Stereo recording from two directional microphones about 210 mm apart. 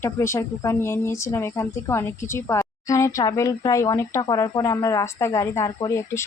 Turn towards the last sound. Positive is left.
turn(degrees=15)  # may be behind; listen again after turning